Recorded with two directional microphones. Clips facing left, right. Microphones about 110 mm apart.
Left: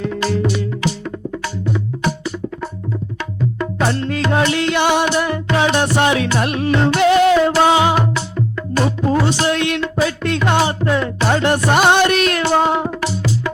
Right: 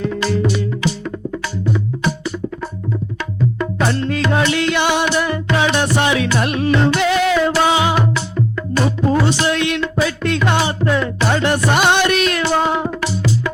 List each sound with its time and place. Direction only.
0.0 s music: 50° left (ahead or behind)
3.2 s music: 35° left (ahead or behind)